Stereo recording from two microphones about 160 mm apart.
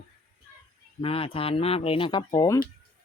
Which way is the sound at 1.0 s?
35° left (ahead or behind).